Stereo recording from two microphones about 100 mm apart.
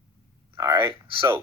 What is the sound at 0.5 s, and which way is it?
Speech, 30° right (ahead or behind).